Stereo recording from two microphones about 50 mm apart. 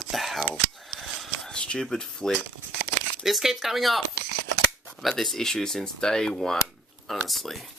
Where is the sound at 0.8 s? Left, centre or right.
Centre.